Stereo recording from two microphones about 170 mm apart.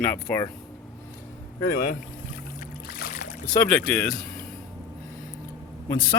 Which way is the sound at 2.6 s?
65° left (ahead or behind).